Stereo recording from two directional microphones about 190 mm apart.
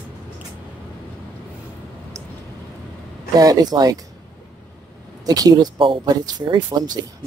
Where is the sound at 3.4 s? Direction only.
20° right (ahead or behind).